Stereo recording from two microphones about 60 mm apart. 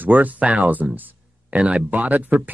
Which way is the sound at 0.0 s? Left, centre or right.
Right.